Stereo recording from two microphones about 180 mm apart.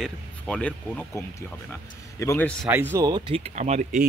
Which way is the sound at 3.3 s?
40° right (ahead or behind).